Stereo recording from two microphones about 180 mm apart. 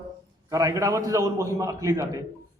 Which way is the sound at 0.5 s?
20° right (ahead or behind).